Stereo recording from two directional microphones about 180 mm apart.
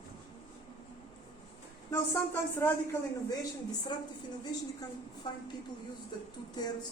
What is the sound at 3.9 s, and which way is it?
Speech, 25° left (ahead or behind).